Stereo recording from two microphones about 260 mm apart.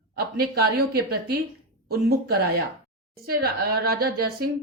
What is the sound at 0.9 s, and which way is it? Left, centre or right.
A woman's voice, right.